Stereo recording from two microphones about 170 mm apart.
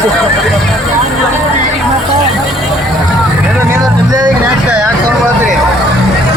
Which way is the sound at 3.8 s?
25° right (ahead or behind).